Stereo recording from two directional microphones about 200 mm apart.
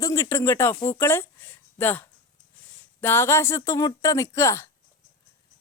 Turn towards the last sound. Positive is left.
turn(degrees=15)  # may be behind; listen again after turning